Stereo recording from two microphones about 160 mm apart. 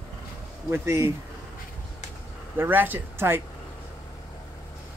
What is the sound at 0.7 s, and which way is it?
Speech, 15° right (ahead or behind).